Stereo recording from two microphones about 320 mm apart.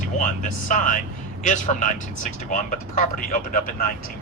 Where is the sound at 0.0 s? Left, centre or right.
Left.